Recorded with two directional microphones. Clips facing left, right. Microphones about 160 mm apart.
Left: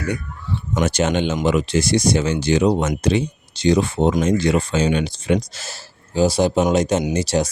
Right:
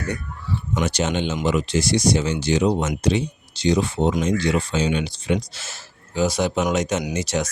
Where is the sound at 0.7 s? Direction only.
45° left (ahead or behind).